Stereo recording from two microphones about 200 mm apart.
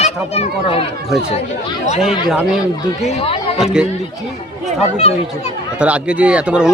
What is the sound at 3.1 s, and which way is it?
Speech, 30° left (ahead or behind).